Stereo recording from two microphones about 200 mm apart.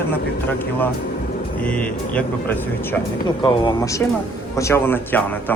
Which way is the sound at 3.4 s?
20° left (ahead or behind).